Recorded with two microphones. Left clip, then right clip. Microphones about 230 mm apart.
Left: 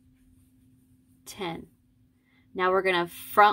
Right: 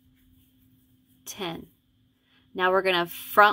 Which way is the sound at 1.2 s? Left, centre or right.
Centre.